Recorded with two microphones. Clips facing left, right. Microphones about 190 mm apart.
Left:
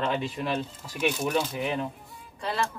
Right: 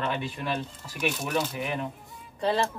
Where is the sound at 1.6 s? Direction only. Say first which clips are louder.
Left 2 dB; 30° left (ahead or behind).